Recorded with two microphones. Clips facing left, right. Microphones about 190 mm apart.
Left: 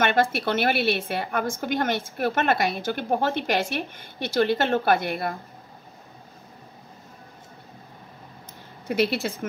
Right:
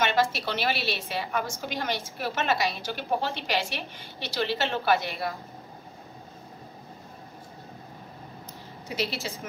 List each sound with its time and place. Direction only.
0.0 s a woman's voice: 55° left (ahead or behind)
8.8 s speech: 55° left (ahead or behind)